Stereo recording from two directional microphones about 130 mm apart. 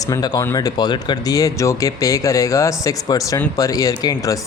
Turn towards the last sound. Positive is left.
turn(degrees=25)  # may be behind; listen again after turning